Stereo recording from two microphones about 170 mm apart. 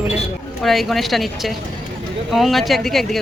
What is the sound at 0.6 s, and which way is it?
Speech, centre (ahead or behind).